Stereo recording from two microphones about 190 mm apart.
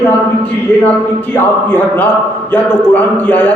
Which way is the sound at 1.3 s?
5° left (ahead or behind).